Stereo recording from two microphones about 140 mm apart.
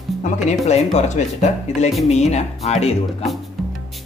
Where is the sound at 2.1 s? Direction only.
50° left (ahead or behind).